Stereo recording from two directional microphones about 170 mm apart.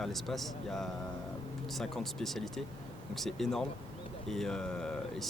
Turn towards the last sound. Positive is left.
turn(degrees=5)  # may be behind; listen again after turning